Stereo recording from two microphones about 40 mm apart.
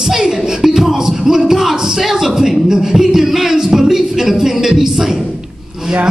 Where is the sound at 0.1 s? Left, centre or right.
Centre.